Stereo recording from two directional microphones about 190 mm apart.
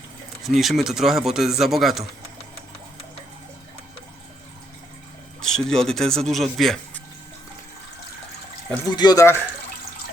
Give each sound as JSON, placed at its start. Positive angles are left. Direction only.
{"t": 0.4, "sound": "speech", "side_deg": 0}
{"t": 5.4, "sound": "speech", "side_deg": 5}
{"t": 9.0, "sound": "speech", "side_deg": 20}